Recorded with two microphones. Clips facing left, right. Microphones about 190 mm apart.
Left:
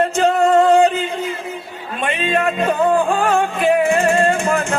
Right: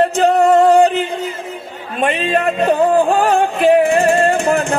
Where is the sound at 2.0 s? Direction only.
35° right (ahead or behind).